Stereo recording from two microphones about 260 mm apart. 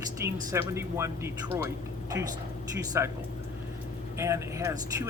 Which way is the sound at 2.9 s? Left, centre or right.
Centre.